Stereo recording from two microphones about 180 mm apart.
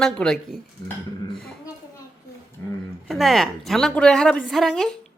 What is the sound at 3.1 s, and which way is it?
A woman's voice, centre (ahead or behind).